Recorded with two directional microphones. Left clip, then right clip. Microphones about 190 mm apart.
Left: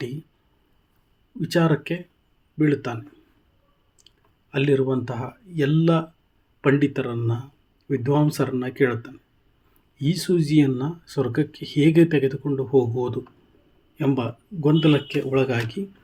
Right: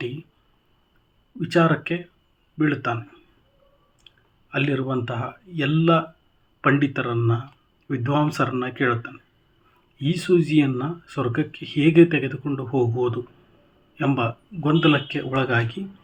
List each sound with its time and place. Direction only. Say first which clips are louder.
1.4 s speech: right 2 dB; 40° left (ahead or behind)
4.5 s speech: left 3 dB; 40° left (ahead or behind)
13.9 s speech: right 1 dB; 35° left (ahead or behind)